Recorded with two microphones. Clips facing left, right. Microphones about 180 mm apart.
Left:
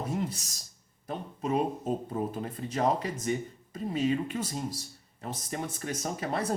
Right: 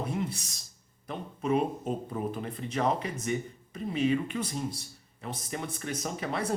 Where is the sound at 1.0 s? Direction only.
40° left (ahead or behind).